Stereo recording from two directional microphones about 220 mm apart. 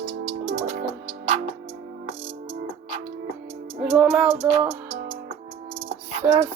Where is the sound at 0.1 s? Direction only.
40° right (ahead or behind).